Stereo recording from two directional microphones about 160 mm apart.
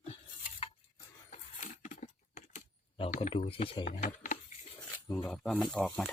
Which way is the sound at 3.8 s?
50° left (ahead or behind).